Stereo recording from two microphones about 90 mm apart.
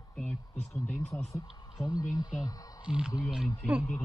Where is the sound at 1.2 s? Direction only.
35° left (ahead or behind).